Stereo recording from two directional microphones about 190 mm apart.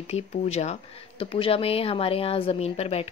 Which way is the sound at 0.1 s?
35° left (ahead or behind).